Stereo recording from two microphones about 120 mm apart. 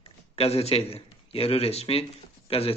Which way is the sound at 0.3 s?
60° left (ahead or behind).